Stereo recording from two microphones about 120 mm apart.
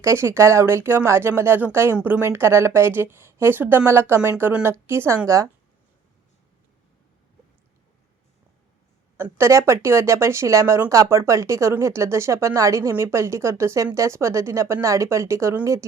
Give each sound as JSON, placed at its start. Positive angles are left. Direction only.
{"t": 0.0, "sound": "speech", "side_deg": -20}
{"t": 9.1, "sound": "speech", "side_deg": -20}